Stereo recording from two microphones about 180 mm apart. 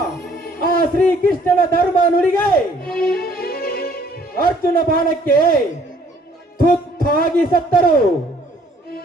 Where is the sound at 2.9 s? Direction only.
60° left (ahead or behind).